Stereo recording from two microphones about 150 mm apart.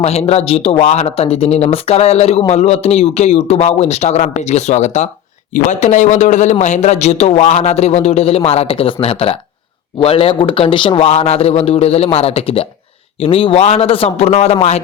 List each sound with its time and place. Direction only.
0.0 s a man's voice: 45° left (ahead or behind)